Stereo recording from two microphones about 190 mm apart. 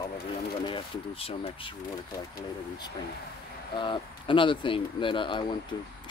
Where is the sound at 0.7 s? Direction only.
30° left (ahead or behind).